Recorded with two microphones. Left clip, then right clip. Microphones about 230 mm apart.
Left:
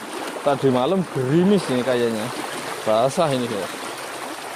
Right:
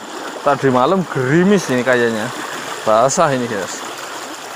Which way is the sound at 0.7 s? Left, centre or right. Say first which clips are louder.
Right 6 dB; right.